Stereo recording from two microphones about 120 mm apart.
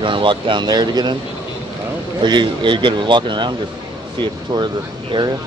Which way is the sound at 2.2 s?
40° right (ahead or behind).